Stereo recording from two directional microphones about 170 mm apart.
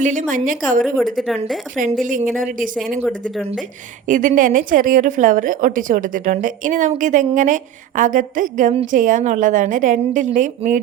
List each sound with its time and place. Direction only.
0.0 s a woman's voice: 45° right (ahead or behind)
4.0 s a woman's voice: 50° right (ahead or behind)